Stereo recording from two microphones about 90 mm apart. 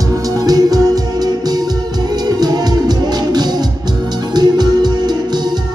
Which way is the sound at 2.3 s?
50° right (ahead or behind).